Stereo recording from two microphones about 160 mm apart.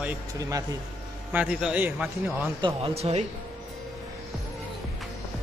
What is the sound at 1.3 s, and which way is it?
A man's voice, 5° right (ahead or behind).